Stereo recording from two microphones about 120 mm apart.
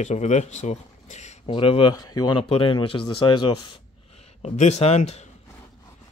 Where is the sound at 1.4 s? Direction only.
45° left (ahead or behind).